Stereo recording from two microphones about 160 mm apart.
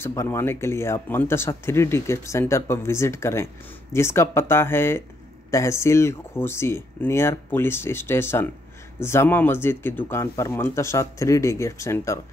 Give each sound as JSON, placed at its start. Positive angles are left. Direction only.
{"t": 0.0, "sound": "speech", "side_deg": 15}